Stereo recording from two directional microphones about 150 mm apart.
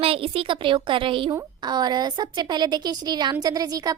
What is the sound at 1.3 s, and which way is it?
A woman's voice, 25° right (ahead or behind).